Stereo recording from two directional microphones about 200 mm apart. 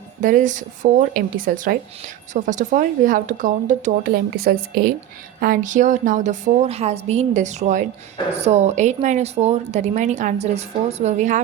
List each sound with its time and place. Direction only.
0.2 s a woman's voice: 40° right (ahead or behind)
4.1 s a woman's voice: 50° right (ahead or behind); by 11.3 s 35° right (ahead or behind)